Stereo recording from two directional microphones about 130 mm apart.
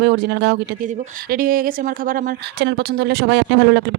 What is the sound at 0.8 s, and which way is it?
Speech, 75° right (ahead or behind).